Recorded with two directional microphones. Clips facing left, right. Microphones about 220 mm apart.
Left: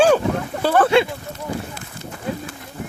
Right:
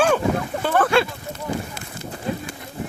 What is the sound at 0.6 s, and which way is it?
Speech, 35° left (ahead or behind).